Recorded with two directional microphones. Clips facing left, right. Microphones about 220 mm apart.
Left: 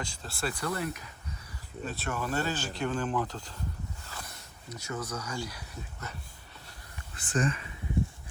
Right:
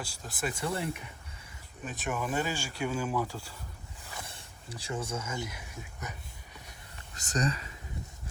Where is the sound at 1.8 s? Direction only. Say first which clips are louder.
Even; 15° right (ahead or behind).